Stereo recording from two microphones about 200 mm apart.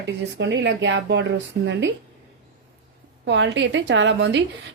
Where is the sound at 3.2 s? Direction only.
65° right (ahead or behind).